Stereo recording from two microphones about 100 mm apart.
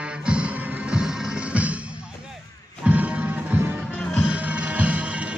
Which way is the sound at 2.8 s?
15° right (ahead or behind).